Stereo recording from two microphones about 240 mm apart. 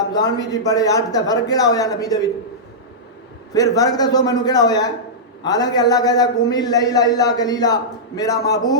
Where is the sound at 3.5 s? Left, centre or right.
Centre.